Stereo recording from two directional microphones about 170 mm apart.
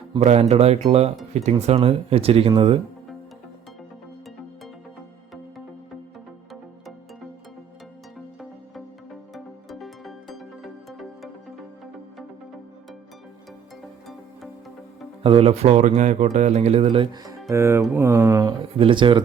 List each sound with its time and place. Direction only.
0.1 s speech: 40° right (ahead or behind)
9.3 s music: centre (ahead or behind)
15.2 s speech: 35° right (ahead or behind)
17.5 s speech: 15° right (ahead or behind)
18.8 s speech: 30° right (ahead or behind)